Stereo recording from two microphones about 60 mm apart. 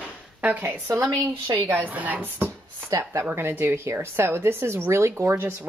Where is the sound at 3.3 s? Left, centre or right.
Right.